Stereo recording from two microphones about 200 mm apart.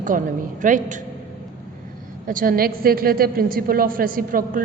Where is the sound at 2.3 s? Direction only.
45° right (ahead or behind).